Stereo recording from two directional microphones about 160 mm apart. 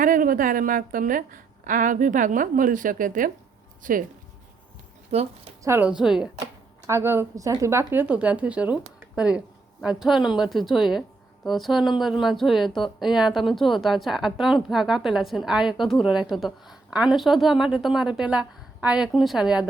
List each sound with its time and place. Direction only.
0.0 s a woman's voice: 60° right (ahead or behind)
5.1 s speech: 45° right (ahead or behind)
5.6 s speech: 10° right (ahead or behind)
6.4 s speech: 20° right (ahead or behind)